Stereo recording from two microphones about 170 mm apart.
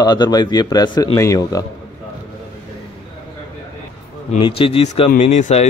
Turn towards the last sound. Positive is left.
turn(degrees=45)  # may be behind; listen again after turning